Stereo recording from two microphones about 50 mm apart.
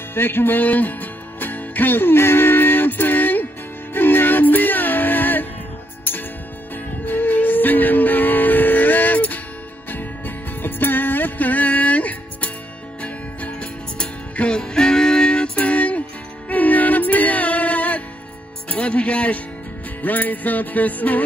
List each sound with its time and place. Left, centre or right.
0.1 s music: left; by 15.6 s centre
15.6 s music: left